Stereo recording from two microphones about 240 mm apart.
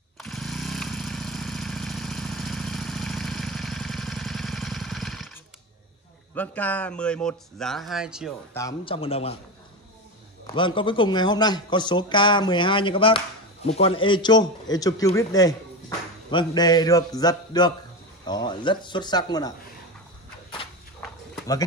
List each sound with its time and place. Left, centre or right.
0.2 s vehicle: centre
6.3 s speech: centre
8.5 s a man's voice: centre
10.4 s a man's voice: centre